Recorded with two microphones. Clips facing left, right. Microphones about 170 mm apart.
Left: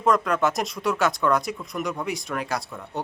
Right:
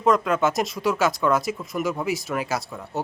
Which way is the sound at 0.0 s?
Centre (ahead or behind).